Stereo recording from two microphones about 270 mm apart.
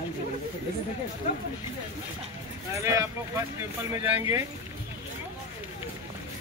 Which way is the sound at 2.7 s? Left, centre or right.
Centre.